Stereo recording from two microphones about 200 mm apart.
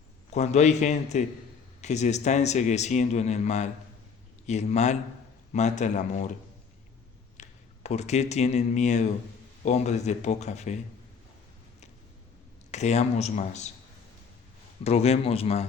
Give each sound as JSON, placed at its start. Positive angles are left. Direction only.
{"t": 0.3, "sound": "speech", "side_deg": 35}
{"t": 7.3, "sound": "speech", "side_deg": 35}
{"t": 12.7, "sound": "speech", "side_deg": 35}
{"t": 14.8, "sound": "speech", "side_deg": 30}